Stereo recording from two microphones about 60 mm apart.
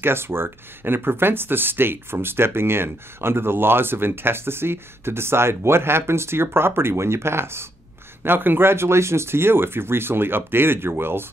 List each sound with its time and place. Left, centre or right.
0.0 s speech: right